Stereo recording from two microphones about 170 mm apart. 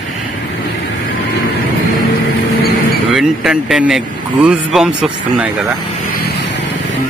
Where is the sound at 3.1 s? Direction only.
5° right (ahead or behind).